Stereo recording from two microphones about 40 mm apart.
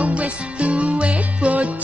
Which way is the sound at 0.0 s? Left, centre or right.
Right.